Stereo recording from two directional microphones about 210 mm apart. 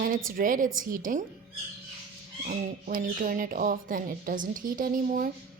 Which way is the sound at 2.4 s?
40° right (ahead or behind).